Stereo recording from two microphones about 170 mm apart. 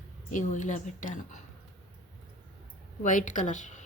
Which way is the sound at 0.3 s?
45° left (ahead or behind).